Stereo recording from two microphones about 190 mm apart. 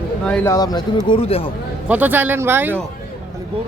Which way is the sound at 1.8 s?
10° right (ahead or behind).